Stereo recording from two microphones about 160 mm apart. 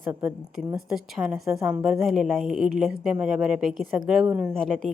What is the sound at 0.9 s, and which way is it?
A woman's voice, centre (ahead or behind).